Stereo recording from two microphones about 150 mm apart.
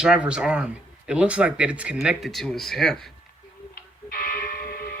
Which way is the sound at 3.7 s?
75° left (ahead or behind).